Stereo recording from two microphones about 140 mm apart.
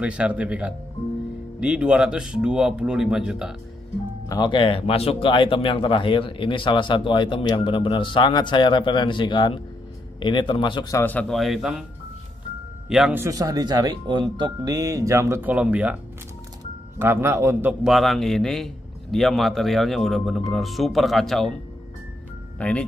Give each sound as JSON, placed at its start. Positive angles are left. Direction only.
{"t": 0.0, "sound": "a man's voice", "side_deg": -10}
{"t": 4.3, "sound": "speech", "side_deg": 35}
{"t": 11.0, "sound": "a man's voice", "side_deg": 10}
{"t": 13.1, "sound": "speech", "side_deg": -20}
{"t": 17.0, "sound": "a man's voice", "side_deg": -15}
{"t": 17.8, "sound": "a man's voice", "side_deg": 0}
{"t": 22.6, "sound": "speech", "side_deg": 10}